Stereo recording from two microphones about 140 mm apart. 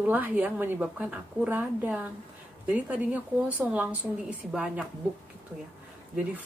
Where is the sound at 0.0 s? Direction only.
10° right (ahead or behind).